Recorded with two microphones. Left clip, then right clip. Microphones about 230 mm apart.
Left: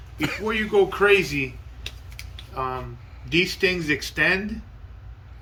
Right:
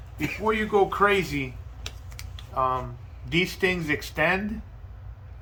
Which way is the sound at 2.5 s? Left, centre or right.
Right.